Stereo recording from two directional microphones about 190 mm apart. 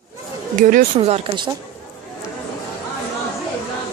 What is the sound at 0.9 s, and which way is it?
Speech, 30° right (ahead or behind).